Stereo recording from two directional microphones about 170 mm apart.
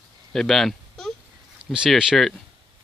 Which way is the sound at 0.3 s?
Centre (ahead or behind).